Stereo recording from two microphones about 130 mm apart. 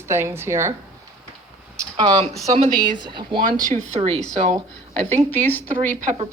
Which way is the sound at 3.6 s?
60° right (ahead or behind).